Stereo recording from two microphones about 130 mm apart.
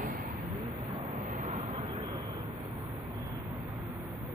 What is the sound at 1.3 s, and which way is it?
Vehicle, 70° right (ahead or behind).